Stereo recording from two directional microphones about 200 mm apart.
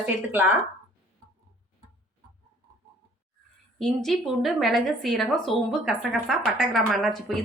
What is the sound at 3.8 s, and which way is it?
Speech, centre (ahead or behind).